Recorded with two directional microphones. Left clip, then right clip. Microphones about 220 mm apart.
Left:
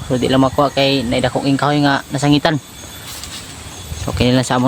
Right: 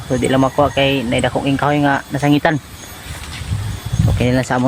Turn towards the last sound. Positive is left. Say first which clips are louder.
# left 2 dB
turn(degrees=15)  # may be behind; listen again after turning